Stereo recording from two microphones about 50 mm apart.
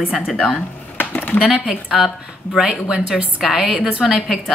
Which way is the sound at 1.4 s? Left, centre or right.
Centre.